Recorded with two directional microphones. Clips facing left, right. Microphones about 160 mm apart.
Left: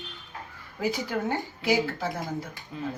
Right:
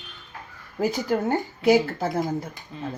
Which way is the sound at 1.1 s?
50° right (ahead or behind).